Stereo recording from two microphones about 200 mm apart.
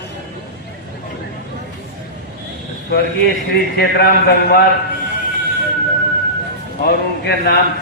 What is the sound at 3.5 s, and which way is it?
A man's voice, 55° left (ahead or behind).